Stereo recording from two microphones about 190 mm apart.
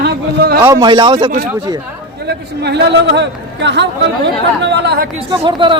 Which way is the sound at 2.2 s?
60° right (ahead or behind).